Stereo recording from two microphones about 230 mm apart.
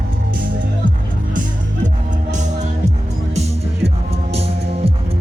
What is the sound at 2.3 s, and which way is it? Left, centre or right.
Music, right.